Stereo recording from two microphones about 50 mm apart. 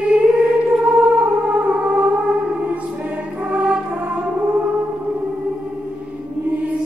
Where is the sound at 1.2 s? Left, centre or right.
Right.